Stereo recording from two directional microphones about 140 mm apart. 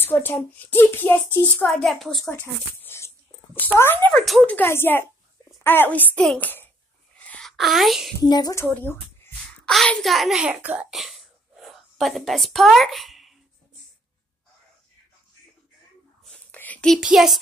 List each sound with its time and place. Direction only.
0.0 s a woman's voice: 15° left (ahead or behind)
4.1 s a woman's voice: centre (ahead or behind)
7.2 s a sound: 5° left (ahead or behind)
8.2 s a woman's voice: 25° left (ahead or behind)
8.6 s speech: 15° left (ahead or behind)
9.7 s a child's voice: centre (ahead or behind)
16.5 s speech: 10° left (ahead or behind)